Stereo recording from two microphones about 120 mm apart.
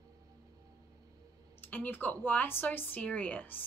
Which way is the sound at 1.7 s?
15° left (ahead or behind).